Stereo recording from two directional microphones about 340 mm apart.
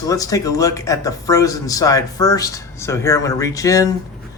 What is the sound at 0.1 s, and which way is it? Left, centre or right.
A man's voice, centre.